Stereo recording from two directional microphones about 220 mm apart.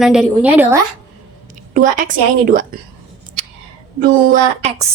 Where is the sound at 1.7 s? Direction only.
35° right (ahead or behind).